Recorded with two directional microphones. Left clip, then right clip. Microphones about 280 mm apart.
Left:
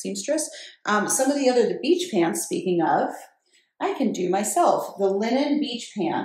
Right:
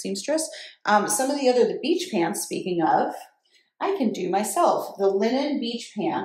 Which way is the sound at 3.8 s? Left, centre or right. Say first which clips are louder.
Even; centre.